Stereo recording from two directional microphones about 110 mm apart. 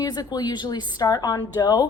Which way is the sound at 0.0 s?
35° left (ahead or behind).